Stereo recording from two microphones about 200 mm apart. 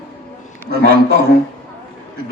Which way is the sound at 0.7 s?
55° right (ahead or behind).